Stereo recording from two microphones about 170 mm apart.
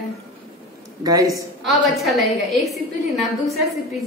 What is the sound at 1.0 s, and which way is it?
Speech, 20° right (ahead or behind).